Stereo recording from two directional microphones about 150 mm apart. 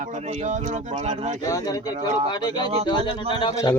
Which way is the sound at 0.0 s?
50° right (ahead or behind).